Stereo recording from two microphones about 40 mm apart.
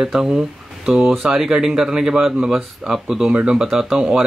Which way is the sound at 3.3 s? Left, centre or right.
Right.